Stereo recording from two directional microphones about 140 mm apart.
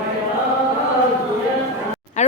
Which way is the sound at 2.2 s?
55° left (ahead or behind).